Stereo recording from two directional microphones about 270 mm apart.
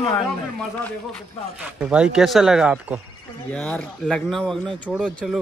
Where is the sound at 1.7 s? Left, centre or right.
Centre.